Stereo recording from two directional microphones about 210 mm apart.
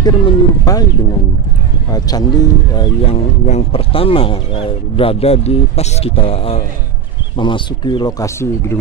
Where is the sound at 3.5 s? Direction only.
30° left (ahead or behind).